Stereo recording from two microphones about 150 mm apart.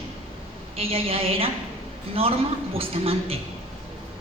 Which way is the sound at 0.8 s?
40° right (ahead or behind).